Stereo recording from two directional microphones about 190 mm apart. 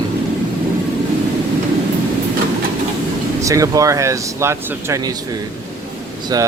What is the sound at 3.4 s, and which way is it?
Speech, 15° right (ahead or behind).